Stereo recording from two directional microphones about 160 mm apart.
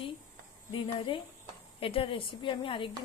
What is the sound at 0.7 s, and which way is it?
Speech, 30° left (ahead or behind).